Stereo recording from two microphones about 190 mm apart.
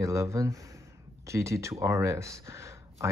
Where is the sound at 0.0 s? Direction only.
15° right (ahead or behind).